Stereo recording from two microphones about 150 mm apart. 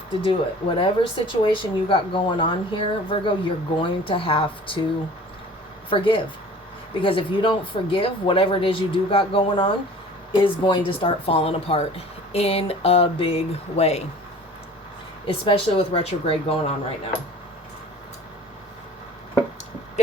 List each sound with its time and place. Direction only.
0.3 s speech: 35° left (ahead or behind)
5.9 s speech: 35° left (ahead or behind)
15.3 s speech: 35° left (ahead or behind)